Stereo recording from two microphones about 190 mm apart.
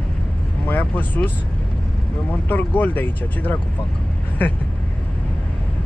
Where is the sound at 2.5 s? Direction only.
10° left (ahead or behind).